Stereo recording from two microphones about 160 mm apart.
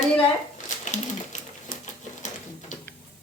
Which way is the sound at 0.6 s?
50° left (ahead or behind).